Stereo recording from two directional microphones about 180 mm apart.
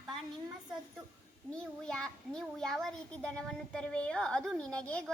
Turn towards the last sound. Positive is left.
turn(degrees=5)  # may be behind; listen again after turning